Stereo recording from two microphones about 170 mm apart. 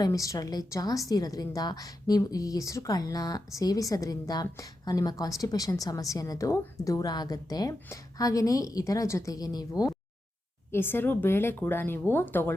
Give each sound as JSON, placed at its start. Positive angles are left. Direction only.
{"t": 0.0, "sound": "a woman's voice", "side_deg": 20}